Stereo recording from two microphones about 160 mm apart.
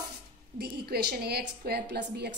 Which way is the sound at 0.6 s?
80° right.